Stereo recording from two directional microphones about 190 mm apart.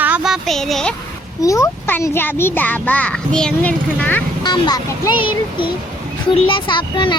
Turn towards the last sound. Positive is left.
turn(degrees=25)  # may be behind; listen again after turning